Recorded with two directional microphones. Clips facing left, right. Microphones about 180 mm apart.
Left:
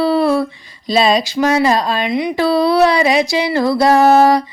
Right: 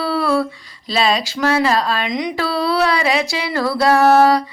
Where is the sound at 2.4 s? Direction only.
20° left (ahead or behind).